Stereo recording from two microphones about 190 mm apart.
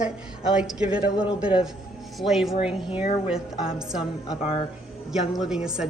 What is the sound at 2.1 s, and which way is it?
A woman's voice, centre (ahead or behind).